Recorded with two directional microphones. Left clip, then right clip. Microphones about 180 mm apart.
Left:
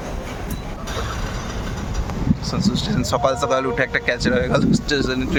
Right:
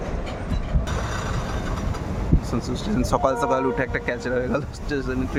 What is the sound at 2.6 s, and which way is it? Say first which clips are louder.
Speech: left 4 dB; 15° right (ahead or behind).